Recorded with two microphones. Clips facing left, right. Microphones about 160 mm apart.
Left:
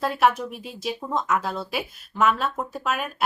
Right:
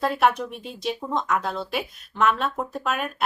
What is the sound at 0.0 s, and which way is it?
Speech, centre (ahead or behind).